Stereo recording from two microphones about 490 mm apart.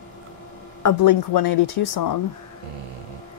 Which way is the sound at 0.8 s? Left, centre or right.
Left.